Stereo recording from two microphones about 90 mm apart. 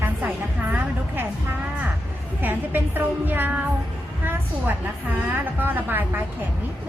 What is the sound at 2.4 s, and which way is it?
A woman's voice, 20° right (ahead or behind).